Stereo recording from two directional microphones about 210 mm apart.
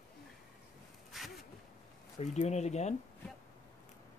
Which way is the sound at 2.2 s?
30° left (ahead or behind).